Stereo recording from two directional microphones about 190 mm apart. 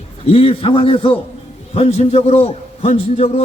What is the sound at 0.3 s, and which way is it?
A man's voice, 30° left (ahead or behind).